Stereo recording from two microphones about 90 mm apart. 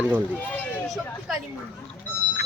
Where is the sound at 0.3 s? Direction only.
20° left (ahead or behind).